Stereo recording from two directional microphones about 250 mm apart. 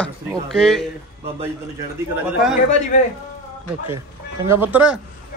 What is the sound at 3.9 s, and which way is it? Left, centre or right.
Speech, centre.